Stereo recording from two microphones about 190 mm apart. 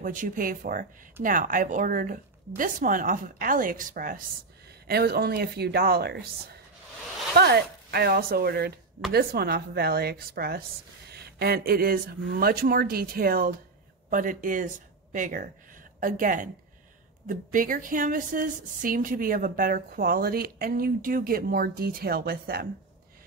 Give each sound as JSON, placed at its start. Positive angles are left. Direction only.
{"t": 0.0, "sound": "a woman's voice", "side_deg": -45}